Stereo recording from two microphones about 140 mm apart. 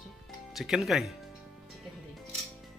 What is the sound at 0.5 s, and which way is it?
Speech, centre (ahead or behind).